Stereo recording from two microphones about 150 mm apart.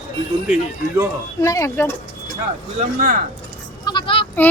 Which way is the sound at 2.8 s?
55° right (ahead or behind).